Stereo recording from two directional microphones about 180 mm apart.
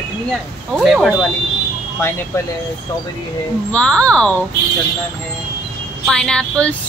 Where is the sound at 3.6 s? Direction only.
5° left (ahead or behind).